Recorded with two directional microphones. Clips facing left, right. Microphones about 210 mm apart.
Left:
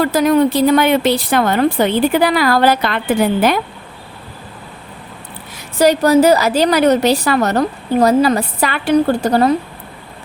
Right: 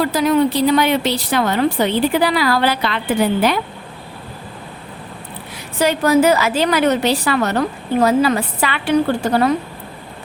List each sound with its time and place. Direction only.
0.0 s a woman's voice: 50° left (ahead or behind)
5.8 s a woman's voice: 40° left (ahead or behind)